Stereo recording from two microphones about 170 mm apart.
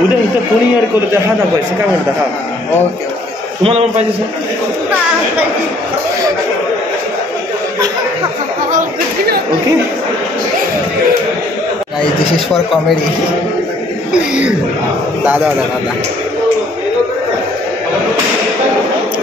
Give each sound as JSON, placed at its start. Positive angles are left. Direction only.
{"t": 3.6, "sound": "a man's voice", "side_deg": -40}
{"t": 8.7, "sound": "chatter", "side_deg": -65}
{"t": 15.2, "sound": "a man's voice", "side_deg": -10}